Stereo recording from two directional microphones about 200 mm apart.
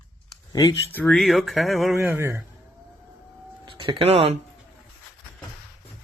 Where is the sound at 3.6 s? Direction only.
25° right (ahead or behind).